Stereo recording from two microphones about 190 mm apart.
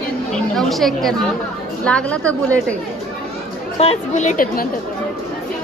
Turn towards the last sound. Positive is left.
turn(degrees=45)  # may be behind; listen again after turning